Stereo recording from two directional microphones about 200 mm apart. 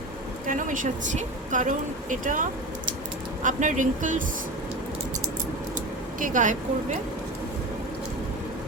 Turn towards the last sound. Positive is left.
turn(degrees=-40)  # may be behind; listen again after turning